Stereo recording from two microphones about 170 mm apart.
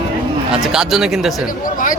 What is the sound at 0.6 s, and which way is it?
Speech, 5° right (ahead or behind).